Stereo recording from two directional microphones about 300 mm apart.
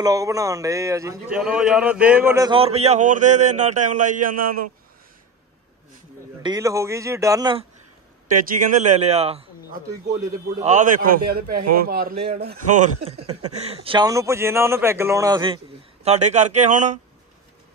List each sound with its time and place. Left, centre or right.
0.0 s a man's voice: centre
4.4 s speech: right
6.4 s speech: centre
8.5 s a man's voice: right
10.6 s a man's voice: right